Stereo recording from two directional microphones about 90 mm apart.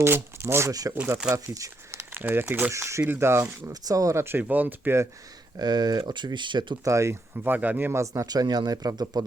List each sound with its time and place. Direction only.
0.0 s speech: 25° right (ahead or behind)
0.7 s speech: 40° right (ahead or behind)
1.2 s speech: 15° right (ahead or behind)
1.5 s speech: 35° right (ahead or behind); by 2.7 s 20° right (ahead or behind)
2.7 s speech: 35° right (ahead or behind)
3.7 s speech: 40° right (ahead or behind); by 5.0 s 25° right (ahead or behind)
5.5 s speech: 50° right (ahead or behind)
6.8 s speech: 35° right (ahead or behind)
8.0 s speech: 35° right (ahead or behind)